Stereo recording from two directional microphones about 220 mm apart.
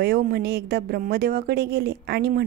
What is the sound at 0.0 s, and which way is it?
Speech, 45° right (ahead or behind).